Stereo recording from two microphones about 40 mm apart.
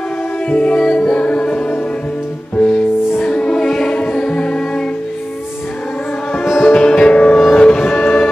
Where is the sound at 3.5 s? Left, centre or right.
Centre.